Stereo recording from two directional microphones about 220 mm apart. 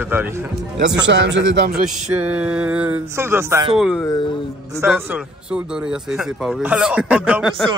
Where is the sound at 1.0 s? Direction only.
55° right (ahead or behind).